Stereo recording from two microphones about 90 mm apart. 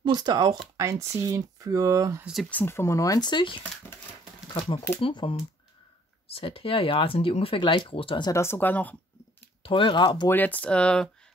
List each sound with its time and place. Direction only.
0.0 s speech: 50° right (ahead or behind)
0.7 s speech: 35° right (ahead or behind)
2.5 s speech: 25° left (ahead or behind)
3.3 s speech: 65° left (ahead or behind)
6.2 s speech: 90° left
8.3 s speech: 30° left (ahead or behind)
9.6 s speech: 75° left (ahead or behind); by 10.2 s 55° left (ahead or behind)
10.3 s speech: 20° left (ahead or behind)